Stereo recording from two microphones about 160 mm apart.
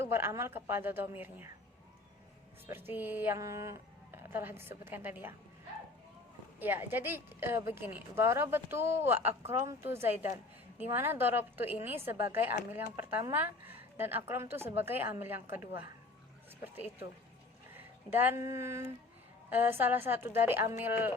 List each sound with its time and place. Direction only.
0.0 s a woman's voice: 15° right (ahead or behind)
2.6 s a woman's voice: 15° right (ahead or behind)
6.6 s a woman's voice: 10° right (ahead or behind)
17.7 s a woman's voice: 10° right (ahead or behind)